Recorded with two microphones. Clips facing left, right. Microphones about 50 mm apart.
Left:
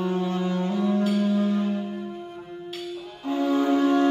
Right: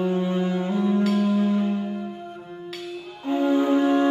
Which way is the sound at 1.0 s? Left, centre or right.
Right.